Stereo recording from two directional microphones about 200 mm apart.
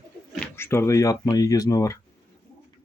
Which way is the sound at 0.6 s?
10° left (ahead or behind).